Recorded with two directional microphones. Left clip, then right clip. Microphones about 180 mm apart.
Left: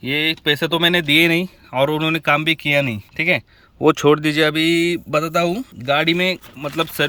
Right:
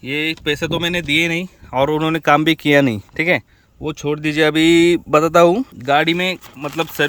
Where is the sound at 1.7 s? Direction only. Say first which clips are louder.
Right 1 dB; 20° right (ahead or behind).